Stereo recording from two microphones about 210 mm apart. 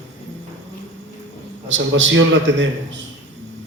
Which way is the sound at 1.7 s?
65° right (ahead or behind).